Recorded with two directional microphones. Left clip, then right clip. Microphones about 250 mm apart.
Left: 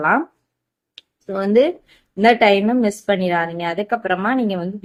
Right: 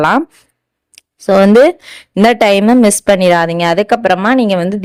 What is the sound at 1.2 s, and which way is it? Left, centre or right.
A woman's voice, right.